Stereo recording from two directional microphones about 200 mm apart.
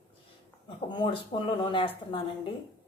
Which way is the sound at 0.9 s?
20° left (ahead or behind).